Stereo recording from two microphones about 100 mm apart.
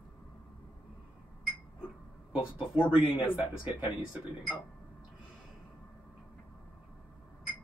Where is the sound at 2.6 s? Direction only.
60° left (ahead or behind).